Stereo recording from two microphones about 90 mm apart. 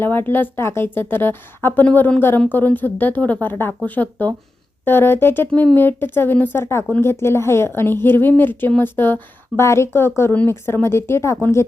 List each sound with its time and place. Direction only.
0.0 s a woman's voice: 25° left (ahead or behind)